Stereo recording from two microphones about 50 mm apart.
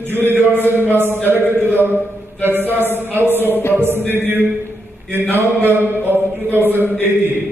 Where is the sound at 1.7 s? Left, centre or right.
Right.